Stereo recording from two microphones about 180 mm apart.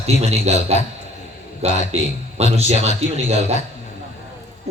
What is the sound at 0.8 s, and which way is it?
Speech, 40° left (ahead or behind).